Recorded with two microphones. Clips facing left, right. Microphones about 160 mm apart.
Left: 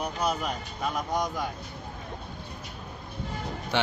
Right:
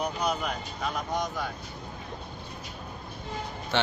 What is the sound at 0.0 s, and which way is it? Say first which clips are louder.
Speech: even; 5° left (ahead or behind).